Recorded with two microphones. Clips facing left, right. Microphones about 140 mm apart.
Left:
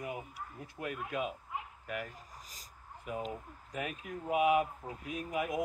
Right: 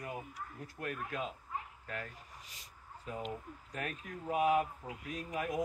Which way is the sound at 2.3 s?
40° left (ahead or behind).